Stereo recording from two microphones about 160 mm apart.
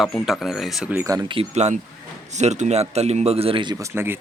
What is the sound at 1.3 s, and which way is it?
A man's voice, 40° right (ahead or behind).